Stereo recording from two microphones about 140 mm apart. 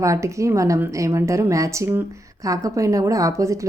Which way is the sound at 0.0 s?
20° right (ahead or behind).